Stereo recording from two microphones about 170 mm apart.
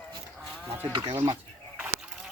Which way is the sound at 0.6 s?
10° right (ahead or behind).